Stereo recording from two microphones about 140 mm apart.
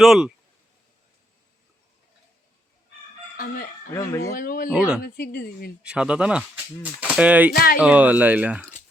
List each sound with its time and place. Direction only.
0.0 s speech: centre (ahead or behind)
3.3 s fowl: 90° left
3.9 s speech: 20° left (ahead or behind)
4.4 s a woman's voice: 90° left
4.7 s speech: 5° right (ahead or behind)
5.0 s a woman's voice: 90° left
5.8 s speech: 5° right (ahead or behind)
7.5 s a woman's voice: 90° left
7.8 s speech: 10° right (ahead or behind)